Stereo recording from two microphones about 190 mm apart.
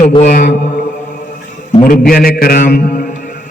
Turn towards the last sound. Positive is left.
turn(degrees=45)  # may be behind; listen again after turning